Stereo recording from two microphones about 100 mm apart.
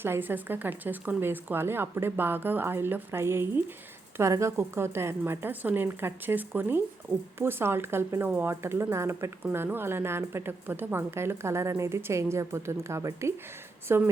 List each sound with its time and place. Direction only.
0.0 s a woman's voice: 20° right (ahead or behind)